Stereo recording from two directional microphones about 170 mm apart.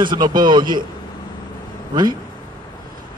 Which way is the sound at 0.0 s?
25° right (ahead or behind).